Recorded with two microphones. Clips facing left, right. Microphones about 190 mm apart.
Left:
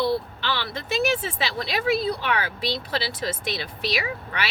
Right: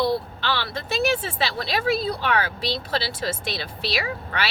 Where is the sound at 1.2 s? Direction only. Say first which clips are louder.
Even; 30° right (ahead or behind).